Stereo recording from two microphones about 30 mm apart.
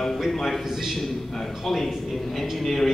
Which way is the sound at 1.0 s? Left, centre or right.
Centre.